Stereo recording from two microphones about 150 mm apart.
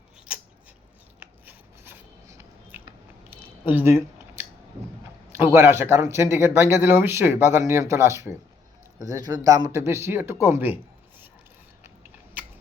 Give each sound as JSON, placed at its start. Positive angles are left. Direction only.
{"t": 1.5, "sound": "filing", "side_deg": -15}
{"t": 3.2, "sound": "a sound", "side_deg": -15}
{"t": 5.3, "sound": "speech", "side_deg": -15}